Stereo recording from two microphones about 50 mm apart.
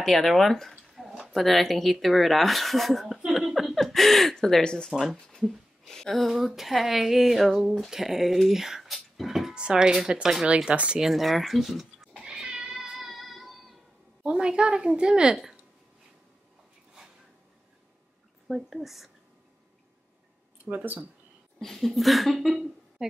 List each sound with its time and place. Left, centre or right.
0.0 s speech: centre
3.3 s a sound: centre
5.9 s speech: centre
9.6 s a woman's voice: centre
11.0 s speech: centre
12.2 s cat: centre
12.5 s music: centre
14.2 s a woman's voice: centre
18.5 s speech: centre
21.5 s speech: centre